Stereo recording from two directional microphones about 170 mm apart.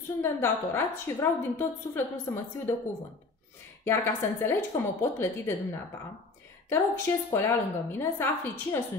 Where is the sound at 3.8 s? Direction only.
15° left (ahead or behind).